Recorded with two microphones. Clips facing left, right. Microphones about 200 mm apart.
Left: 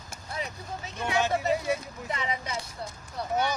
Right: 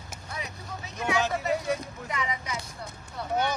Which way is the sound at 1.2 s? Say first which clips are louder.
Left 1 dB; centre (ahead or behind).